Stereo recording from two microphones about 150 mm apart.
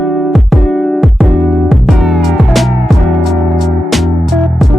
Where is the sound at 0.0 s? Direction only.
Centre (ahead or behind).